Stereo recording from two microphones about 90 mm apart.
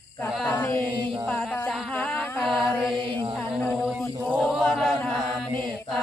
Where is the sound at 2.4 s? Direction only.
Centre (ahead or behind).